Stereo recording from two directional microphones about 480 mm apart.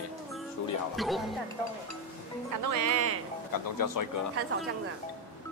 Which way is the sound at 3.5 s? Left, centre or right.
Left.